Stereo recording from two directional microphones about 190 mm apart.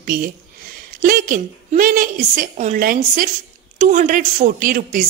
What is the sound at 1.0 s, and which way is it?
A woman's voice, 45° right (ahead or behind).